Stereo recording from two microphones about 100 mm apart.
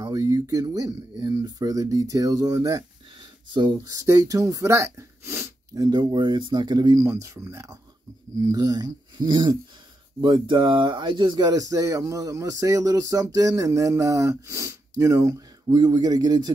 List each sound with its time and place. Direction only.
0.0 s speech: 35° right (ahead or behind)
3.4 s speech: 50° right (ahead or behind)
3.9 s speech: 30° right (ahead or behind)
5.8 s speech: 40° right (ahead or behind)
7.0 s speech: 30° right (ahead or behind)
8.4 s speech: 35° right (ahead or behind)